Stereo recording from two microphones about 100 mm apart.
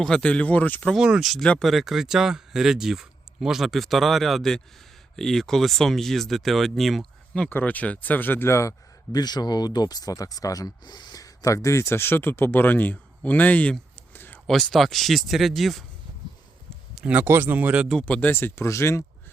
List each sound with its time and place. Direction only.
0.0 s speech: 10° left (ahead or behind)
0.9 s speech: 5° right (ahead or behind); by 8.7 s 30° left (ahead or behind)
9.1 s speech: 45° left (ahead or behind); by 14.3 s 20° left (ahead or behind)
14.4 s speech: centre (ahead or behind)
16.9 s speech: 10° right (ahead or behind)
18.0 s speech: 15° left (ahead or behind)